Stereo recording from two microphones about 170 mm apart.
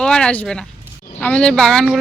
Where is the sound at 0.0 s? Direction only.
5° left (ahead or behind).